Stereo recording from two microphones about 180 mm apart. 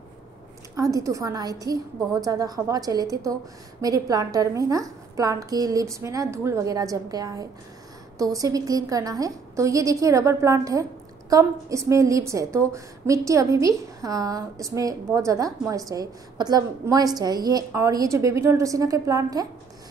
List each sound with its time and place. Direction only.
0.7 s a woman's voice: 20° right (ahead or behind)